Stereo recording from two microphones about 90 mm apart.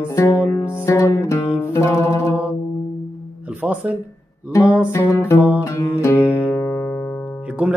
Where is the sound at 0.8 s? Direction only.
35° left (ahead or behind).